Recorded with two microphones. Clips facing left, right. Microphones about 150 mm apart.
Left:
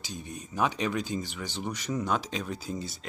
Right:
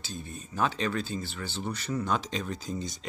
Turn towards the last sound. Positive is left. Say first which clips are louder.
# even
turn(degrees=5)  # may be behind; listen again after turning